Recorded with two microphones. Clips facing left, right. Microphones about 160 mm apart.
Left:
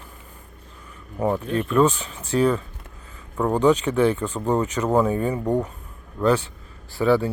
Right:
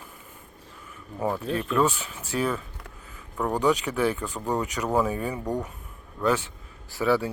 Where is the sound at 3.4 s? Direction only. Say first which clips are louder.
Left 5 dB; 20° left (ahead or behind).